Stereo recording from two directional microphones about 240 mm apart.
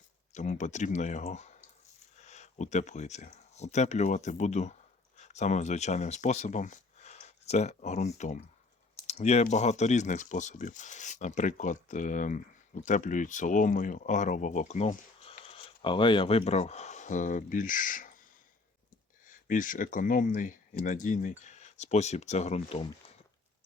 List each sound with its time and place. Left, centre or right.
0.3 s speech: left
19.3 s speech: left